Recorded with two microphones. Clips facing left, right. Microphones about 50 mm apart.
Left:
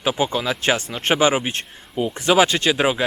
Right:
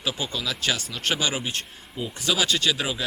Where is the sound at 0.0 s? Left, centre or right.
Left.